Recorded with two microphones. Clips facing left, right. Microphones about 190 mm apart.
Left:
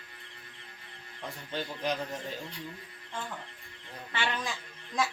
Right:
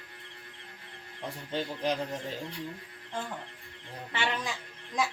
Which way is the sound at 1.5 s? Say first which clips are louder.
Right 2 dB; 30° right (ahead or behind).